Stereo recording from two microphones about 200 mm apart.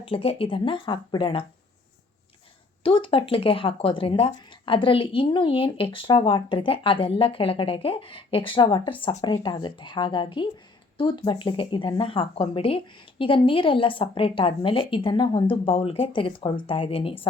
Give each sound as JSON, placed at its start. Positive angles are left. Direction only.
{"t": 0.0, "sound": "speech", "side_deg": 30}
{"t": 2.8, "sound": "speech", "side_deg": 25}